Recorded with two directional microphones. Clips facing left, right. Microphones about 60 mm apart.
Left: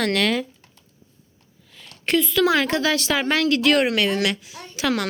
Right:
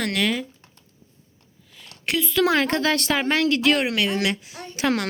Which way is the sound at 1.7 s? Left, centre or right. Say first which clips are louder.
Left 5 dB; centre.